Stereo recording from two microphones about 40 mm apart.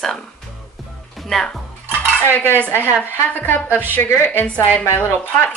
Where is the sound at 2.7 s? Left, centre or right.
Left.